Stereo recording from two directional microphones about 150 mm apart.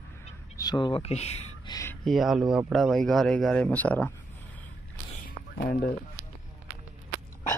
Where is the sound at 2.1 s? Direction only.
Centre (ahead or behind).